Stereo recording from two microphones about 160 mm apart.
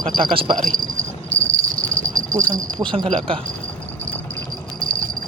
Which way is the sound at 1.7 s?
60° right (ahead or behind).